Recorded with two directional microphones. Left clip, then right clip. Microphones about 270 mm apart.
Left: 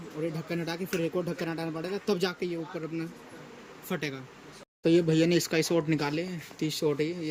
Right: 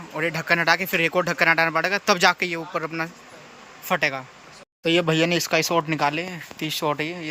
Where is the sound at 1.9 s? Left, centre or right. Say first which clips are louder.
Right 7 dB; centre.